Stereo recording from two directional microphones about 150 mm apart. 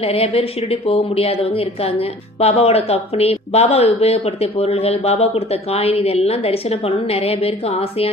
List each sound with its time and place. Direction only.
0.0 s speech: 40° left (ahead or behind)